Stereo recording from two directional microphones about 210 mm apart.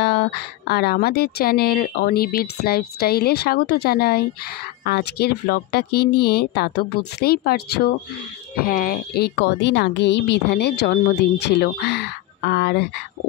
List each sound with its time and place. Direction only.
0.0 s a woman's voice: 50° left (ahead or behind)